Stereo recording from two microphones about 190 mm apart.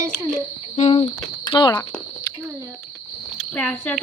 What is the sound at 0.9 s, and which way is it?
Speech, 25° left (ahead or behind).